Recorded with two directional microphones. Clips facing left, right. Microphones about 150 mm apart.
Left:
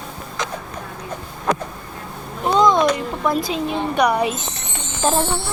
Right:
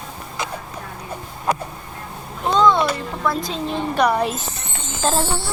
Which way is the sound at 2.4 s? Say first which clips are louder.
Left 1 dB; 15° left (ahead or behind).